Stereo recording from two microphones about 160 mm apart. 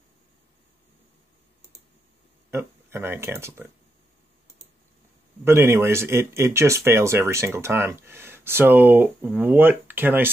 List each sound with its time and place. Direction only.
2.5 s speech: 15° right (ahead or behind)
5.4 s speech: 15° right (ahead or behind)